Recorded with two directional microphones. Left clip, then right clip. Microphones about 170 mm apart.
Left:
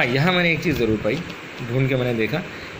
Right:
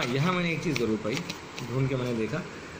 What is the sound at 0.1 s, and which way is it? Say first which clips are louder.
Speech: left 9 dB; 25° left (ahead or behind).